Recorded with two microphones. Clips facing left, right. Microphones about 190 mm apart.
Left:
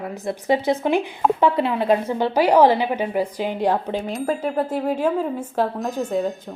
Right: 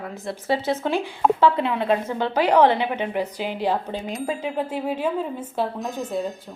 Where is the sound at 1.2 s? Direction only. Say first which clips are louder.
Right 1 dB; centre (ahead or behind).